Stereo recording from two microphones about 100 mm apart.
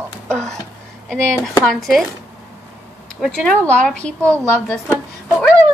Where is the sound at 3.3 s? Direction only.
10° left (ahead or behind).